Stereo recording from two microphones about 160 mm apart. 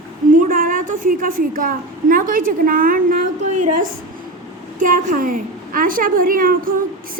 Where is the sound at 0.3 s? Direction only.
60° right (ahead or behind).